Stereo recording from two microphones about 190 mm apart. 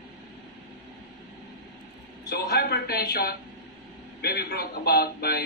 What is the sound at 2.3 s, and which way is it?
A man's voice, 55° left (ahead or behind).